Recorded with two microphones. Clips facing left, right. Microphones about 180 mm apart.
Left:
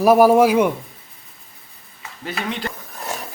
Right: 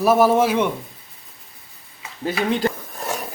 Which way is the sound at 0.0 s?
10° left (ahead or behind).